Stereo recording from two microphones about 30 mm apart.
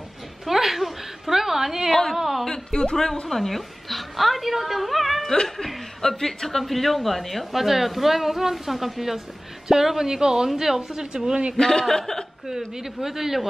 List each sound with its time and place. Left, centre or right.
0.5 s a sound: centre
2.1 s speech: centre
2.7 s a woman's voice: left
3.3 s a woman's voice: centre
6.0 s a woman's voice: centre
7.5 s a woman's voice: centre
11.5 s a woman's voice: centre
12.4 s speech: centre